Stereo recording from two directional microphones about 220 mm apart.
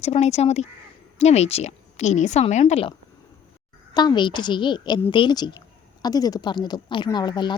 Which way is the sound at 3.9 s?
20° left (ahead or behind).